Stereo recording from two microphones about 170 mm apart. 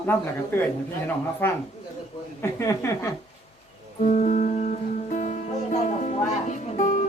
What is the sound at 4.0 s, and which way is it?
Music, 45° left (ahead or behind).